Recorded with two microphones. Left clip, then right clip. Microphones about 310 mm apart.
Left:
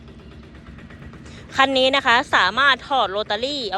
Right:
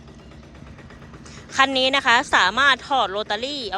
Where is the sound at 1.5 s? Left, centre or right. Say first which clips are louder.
Left 2 dB; centre.